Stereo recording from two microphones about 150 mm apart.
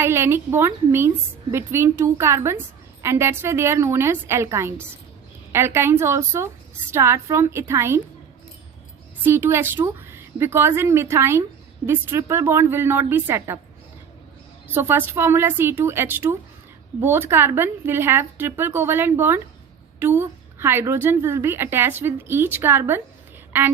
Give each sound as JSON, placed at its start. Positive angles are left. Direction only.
{"t": 0.0, "sound": "a woman's voice", "side_deg": -15}
{"t": 9.2, "sound": "a woman's voice", "side_deg": -15}
{"t": 14.7, "sound": "a woman's voice", "side_deg": -15}